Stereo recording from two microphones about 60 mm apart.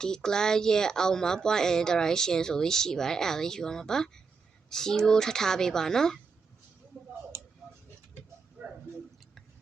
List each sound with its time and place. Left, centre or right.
0.0 s speech: centre
7.3 s tick-tock: right